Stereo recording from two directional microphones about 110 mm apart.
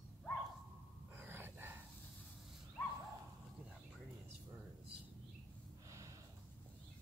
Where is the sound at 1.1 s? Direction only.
20° right (ahead or behind).